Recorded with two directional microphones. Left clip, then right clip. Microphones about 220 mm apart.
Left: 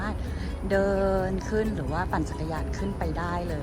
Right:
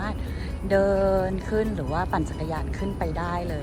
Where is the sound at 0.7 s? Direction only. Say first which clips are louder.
Right 3 dB; 10° left (ahead or behind).